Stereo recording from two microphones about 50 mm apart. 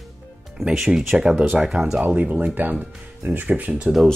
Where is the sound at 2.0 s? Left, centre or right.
Right.